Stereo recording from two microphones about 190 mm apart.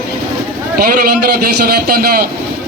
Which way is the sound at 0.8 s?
50° right (ahead or behind).